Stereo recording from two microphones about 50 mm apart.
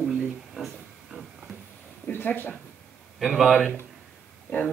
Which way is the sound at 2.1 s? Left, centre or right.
Left.